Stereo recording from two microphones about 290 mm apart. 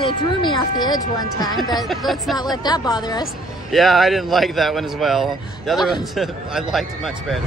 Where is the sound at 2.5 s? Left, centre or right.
Centre.